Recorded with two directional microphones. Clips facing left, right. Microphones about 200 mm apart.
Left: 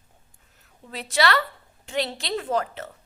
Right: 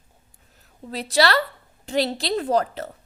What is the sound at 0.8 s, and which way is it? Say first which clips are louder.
A woman's voice: right 3 dB; 35° right (ahead or behind).